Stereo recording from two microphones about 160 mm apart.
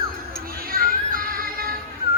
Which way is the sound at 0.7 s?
65° right (ahead or behind).